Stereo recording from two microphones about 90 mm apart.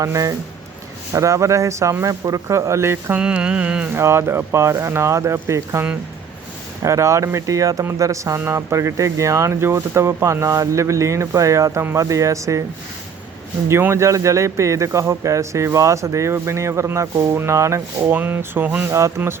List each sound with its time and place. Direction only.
0.0 s speech: 40° right (ahead or behind)
3.2 s mantra: 10° right (ahead or behind)
3.9 s speech: 30° right (ahead or behind)
6.8 s speech: 35° right (ahead or behind)
13.7 s speech: 30° right (ahead or behind)
18.1 s speech: 20° right (ahead or behind)
18.9 s speech: 35° right (ahead or behind)